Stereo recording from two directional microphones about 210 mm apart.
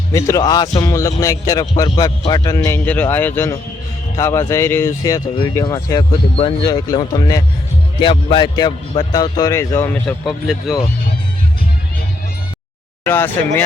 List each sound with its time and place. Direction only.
0.1 s speech: 15° left (ahead or behind); by 10.8 s centre (ahead or behind)
13.1 s speech: 10° left (ahead or behind)